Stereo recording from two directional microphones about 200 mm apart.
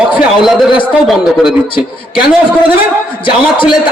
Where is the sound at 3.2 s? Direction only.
25° left (ahead or behind).